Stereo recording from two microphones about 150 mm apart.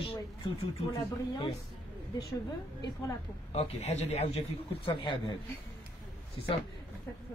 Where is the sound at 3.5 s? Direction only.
45° left (ahead or behind).